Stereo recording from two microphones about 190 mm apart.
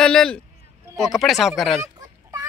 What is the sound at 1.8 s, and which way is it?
Fowl, 15° right (ahead or behind).